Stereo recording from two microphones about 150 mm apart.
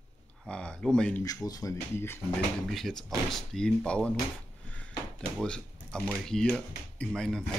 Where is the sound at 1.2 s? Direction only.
25° left (ahead or behind).